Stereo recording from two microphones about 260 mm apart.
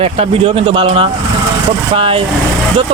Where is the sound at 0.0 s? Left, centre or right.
Right.